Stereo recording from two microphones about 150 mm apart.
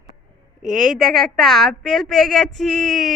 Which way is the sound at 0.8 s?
Centre (ahead or behind).